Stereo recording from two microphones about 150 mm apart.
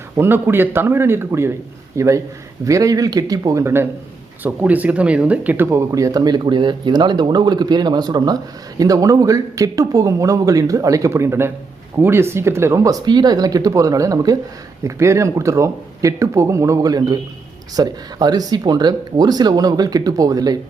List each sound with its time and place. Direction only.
0.2 s a man's voice: 15° right (ahead or behind)